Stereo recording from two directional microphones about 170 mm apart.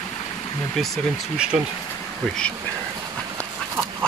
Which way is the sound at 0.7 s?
Centre (ahead or behind).